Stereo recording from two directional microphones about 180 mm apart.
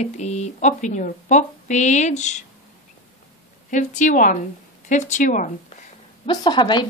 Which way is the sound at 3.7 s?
45° left (ahead or behind).